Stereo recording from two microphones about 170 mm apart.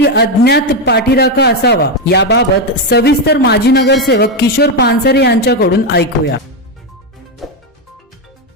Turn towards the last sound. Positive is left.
turn(degrees=0)  # may be behind; listen again after turning